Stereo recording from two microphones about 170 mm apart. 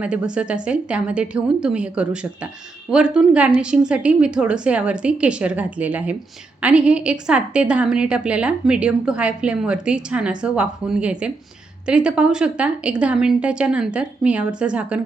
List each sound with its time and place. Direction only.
0.0 s a woman's voice: 5° right (ahead or behind)